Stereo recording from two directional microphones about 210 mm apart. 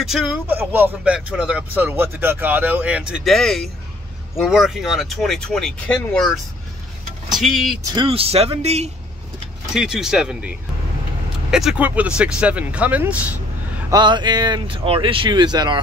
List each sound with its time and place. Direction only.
0.0 s speech: centre (ahead or behind)
7.7 s speech: 20° right (ahead or behind)
9.8 s speech: centre (ahead or behind)
13.9 s speech: 20° right (ahead or behind)